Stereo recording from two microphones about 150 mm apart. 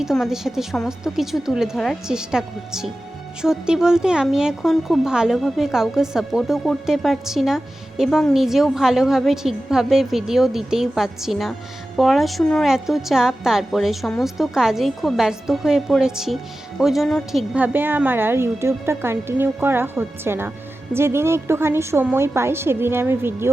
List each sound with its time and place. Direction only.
0.0 s speech: centre (ahead or behind)
17.5 s a woman's voice: 10° right (ahead or behind)